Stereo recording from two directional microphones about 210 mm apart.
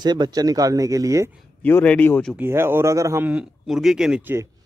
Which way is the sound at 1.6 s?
10° left (ahead or behind).